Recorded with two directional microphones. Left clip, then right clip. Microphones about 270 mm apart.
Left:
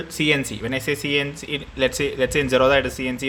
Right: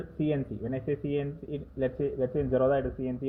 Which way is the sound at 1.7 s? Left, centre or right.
Left.